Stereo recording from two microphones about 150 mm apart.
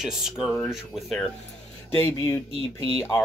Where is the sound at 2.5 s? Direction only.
40° right (ahead or behind).